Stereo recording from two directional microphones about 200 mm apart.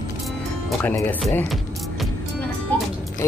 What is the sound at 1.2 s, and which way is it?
Music, 5° left (ahead or behind).